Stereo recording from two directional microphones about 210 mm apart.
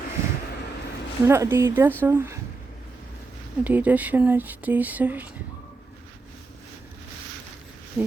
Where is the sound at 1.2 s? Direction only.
10° right (ahead or behind).